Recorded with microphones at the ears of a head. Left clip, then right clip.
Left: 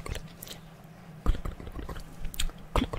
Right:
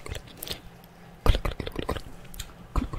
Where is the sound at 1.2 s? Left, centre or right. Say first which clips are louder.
Right 10 dB; right.